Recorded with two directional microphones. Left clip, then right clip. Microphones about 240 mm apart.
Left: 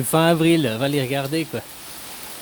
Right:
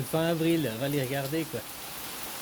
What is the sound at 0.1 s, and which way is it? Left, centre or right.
Speech, left.